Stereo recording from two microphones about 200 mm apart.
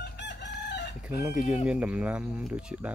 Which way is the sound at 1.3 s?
5° right (ahead or behind).